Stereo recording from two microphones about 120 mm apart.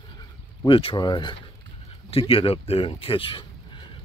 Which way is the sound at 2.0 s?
50° left (ahead or behind).